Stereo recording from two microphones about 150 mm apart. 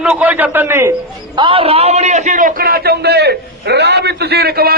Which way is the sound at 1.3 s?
35° right (ahead or behind).